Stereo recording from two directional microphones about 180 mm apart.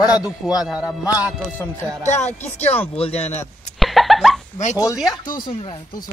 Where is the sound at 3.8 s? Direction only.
Centre (ahead or behind).